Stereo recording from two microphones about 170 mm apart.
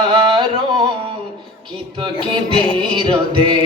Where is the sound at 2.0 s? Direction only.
30° right (ahead or behind).